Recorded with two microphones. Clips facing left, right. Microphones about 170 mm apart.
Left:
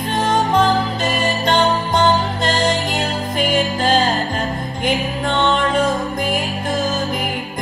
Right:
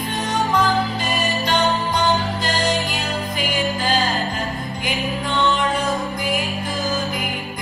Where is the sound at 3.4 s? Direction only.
50° left (ahead or behind).